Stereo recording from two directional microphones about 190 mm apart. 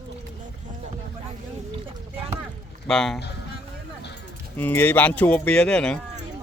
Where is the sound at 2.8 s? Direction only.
Centre (ahead or behind).